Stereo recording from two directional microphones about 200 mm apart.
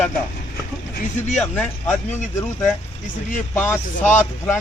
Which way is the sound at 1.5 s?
10° left (ahead or behind).